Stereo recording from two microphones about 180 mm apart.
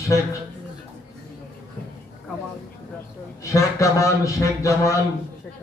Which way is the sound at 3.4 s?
15° left (ahead or behind).